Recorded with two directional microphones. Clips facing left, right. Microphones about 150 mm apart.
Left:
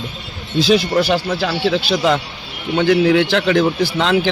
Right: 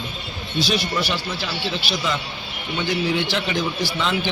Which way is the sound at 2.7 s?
65° left (ahead or behind).